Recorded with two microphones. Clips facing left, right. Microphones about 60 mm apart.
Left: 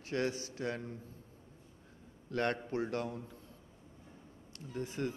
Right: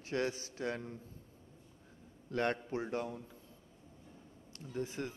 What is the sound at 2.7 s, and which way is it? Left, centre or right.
Speech, centre.